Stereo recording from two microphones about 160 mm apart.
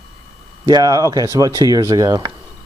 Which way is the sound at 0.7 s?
25° right (ahead or behind).